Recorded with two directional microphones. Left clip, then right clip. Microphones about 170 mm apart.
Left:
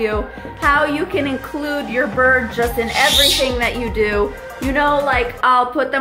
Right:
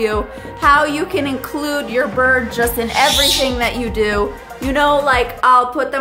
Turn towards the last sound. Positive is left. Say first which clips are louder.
# right 2 dB
turn(degrees=0)  # may be behind; listen again after turning